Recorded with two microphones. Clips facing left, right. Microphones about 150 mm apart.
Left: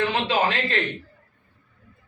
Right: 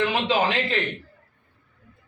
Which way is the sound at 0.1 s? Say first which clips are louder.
Even; 10° right (ahead or behind).